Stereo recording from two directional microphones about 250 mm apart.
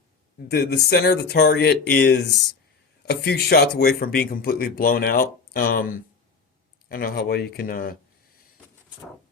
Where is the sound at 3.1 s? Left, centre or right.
Left.